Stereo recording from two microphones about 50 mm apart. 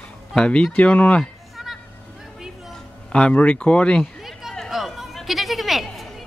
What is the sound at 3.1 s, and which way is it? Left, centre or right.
Speech, left.